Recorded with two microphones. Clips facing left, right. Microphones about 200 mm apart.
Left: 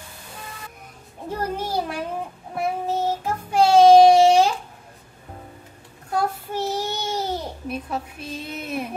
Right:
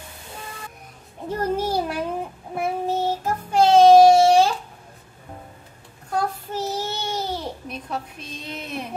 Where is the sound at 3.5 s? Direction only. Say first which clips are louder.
Even; 10° left (ahead or behind).